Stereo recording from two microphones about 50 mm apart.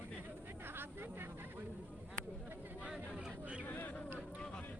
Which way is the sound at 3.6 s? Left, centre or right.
Left.